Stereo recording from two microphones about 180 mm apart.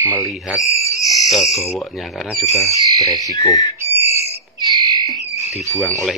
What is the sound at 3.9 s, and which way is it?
Whistle, 35° left (ahead or behind).